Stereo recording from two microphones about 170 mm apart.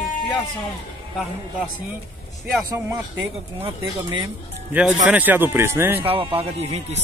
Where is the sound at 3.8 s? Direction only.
25° right (ahead or behind).